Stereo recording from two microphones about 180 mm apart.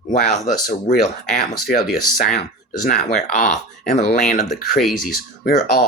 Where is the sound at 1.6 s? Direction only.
55° left (ahead or behind).